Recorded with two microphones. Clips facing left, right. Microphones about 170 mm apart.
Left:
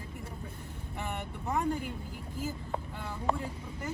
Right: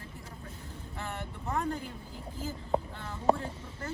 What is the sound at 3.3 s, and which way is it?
Speech, 40° right (ahead or behind).